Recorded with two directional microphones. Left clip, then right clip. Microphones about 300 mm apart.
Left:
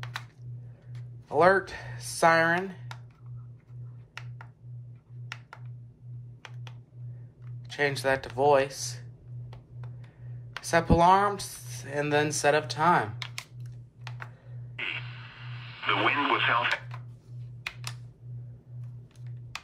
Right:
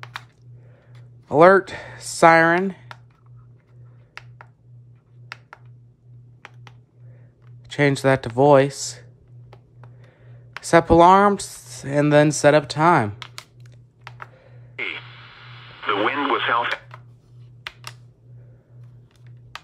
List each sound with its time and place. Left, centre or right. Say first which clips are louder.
1.4 s speech: right 9 dB; right
7.7 s speech: right 8 dB; right
10.7 s speech: right 9 dB; centre
14.0 s music: right 4 dB; centre
14.8 s radio: right 5 dB; centre